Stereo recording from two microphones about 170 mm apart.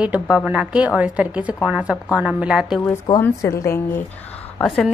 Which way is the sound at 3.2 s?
20° left (ahead or behind).